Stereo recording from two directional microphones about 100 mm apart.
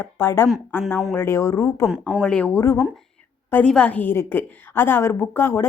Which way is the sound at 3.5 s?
10° left (ahead or behind).